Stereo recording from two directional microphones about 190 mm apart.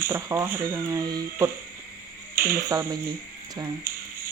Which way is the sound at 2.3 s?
50° right (ahead or behind).